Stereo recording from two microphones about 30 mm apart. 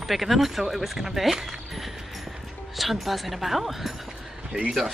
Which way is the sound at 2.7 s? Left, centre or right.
Centre.